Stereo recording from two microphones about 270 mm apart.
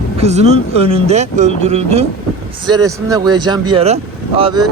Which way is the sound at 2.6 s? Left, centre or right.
Centre.